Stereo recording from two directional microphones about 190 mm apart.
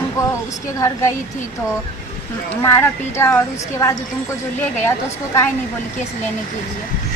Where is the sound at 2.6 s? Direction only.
15° left (ahead or behind).